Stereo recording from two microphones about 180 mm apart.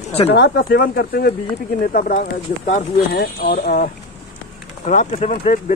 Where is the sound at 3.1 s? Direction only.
60° left (ahead or behind).